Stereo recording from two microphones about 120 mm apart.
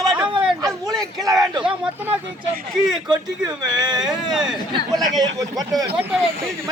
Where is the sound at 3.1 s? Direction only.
35° right (ahead or behind).